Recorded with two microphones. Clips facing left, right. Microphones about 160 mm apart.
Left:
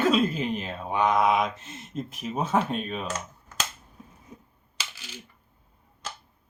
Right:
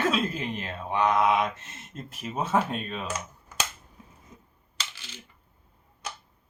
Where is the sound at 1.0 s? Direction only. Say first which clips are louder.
Left 1 dB; 15° left (ahead or behind).